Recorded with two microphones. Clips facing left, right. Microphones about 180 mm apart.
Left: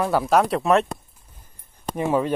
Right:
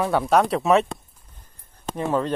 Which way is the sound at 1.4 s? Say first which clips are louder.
Even; 10° left (ahead or behind).